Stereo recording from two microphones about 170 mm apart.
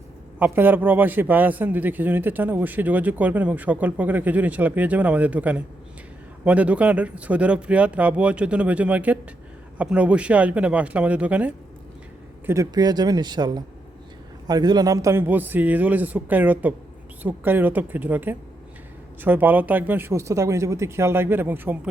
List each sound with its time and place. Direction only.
0.3 s a man's voice: 10° right (ahead or behind)
12.5 s a man's voice: 20° right (ahead or behind)